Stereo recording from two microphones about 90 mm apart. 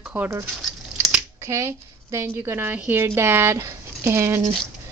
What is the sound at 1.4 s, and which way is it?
A woman's voice, 30° right (ahead or behind).